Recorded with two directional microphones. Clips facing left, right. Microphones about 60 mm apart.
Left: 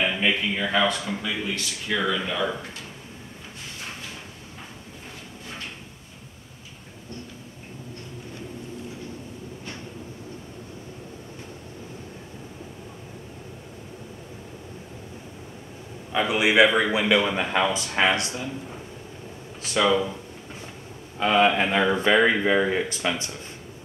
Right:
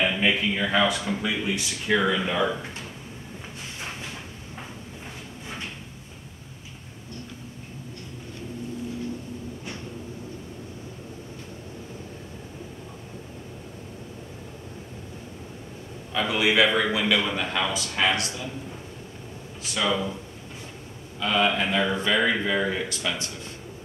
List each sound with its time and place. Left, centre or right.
0.0 s speech: centre
16.1 s a man's voice: centre
19.9 s a man's voice: centre
21.2 s a man's voice: left